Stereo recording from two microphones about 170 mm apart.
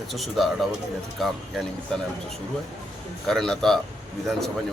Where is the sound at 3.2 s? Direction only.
5° left (ahead or behind).